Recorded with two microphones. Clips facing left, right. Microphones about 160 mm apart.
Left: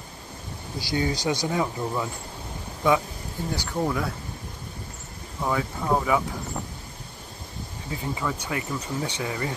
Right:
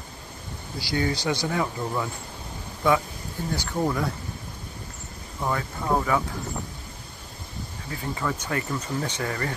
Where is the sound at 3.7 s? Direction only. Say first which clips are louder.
Right 1 dB; centre (ahead or behind).